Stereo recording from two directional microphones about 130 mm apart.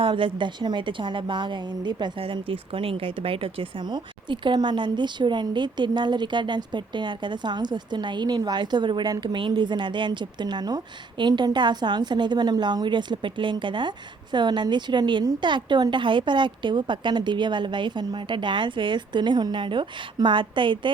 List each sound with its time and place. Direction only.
0.0 s a woman's voice: 40° right (ahead or behind)